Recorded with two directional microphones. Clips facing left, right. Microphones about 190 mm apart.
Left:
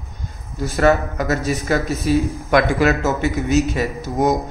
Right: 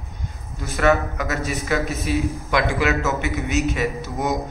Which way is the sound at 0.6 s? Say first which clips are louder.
Left 3 dB; 35° left (ahead or behind).